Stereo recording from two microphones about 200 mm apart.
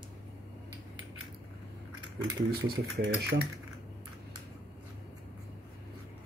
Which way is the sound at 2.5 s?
55° right (ahead or behind).